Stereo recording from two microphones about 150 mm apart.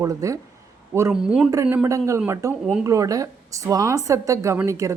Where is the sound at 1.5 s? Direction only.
20° right (ahead or behind).